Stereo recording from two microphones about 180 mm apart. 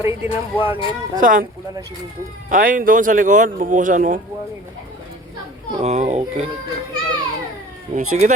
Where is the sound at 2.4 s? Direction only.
50° right (ahead or behind).